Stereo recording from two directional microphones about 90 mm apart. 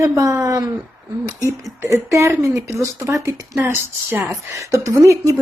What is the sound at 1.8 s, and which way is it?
A woman's voice, 35° right (ahead or behind).